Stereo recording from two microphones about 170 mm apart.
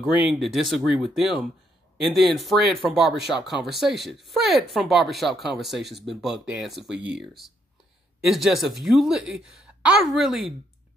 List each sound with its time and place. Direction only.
0.0 s speech: centre (ahead or behind)